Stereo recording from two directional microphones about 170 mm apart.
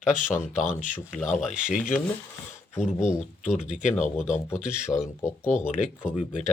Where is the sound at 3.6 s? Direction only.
45° left (ahead or behind).